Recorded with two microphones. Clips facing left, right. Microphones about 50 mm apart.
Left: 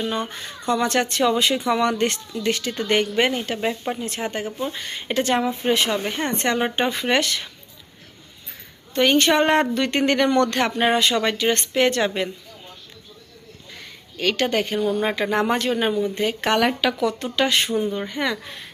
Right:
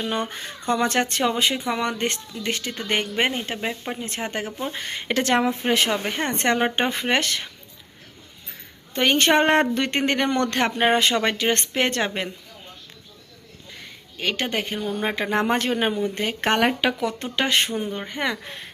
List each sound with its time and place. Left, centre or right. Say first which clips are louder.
0.1 s speech: even; right
1.2 s a woman's voice: left 3 dB; right
3.6 s speech: left 4 dB; centre
4.0 s a woman's voice: left 2 dB; right
4.3 s speech: left 2 dB; right
5.9 s speech: left 1 dB; right
8.9 s speech: left 1 dB; right
10.0 s speech: left 5 dB; right
13.8 s speech: left 3 dB; centre
15.3 s speech: left 1 dB; right
17.8 s a woman's voice: left 4 dB; centre
18.1 s speech: left 1 dB; right